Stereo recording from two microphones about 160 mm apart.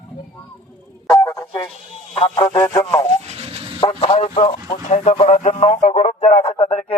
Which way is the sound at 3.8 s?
35° left (ahead or behind).